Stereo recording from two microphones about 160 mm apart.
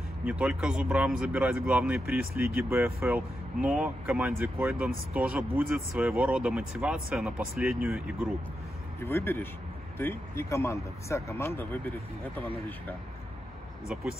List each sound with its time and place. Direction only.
0.2 s speech: 5° right (ahead or behind)
9.0 s speech: 15° left (ahead or behind)